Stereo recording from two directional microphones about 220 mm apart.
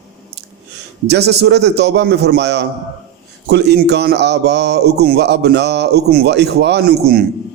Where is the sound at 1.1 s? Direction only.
50° right (ahead or behind).